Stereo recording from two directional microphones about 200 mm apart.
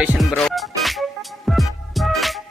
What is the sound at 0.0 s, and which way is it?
Speech, 5° right (ahead or behind).